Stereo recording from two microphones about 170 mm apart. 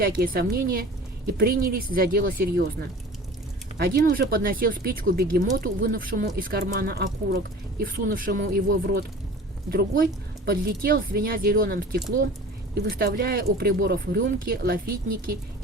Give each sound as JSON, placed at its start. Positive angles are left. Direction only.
{"t": 0.0, "sound": "speech", "side_deg": -60}
{"t": 3.8, "sound": "speech", "side_deg": -65}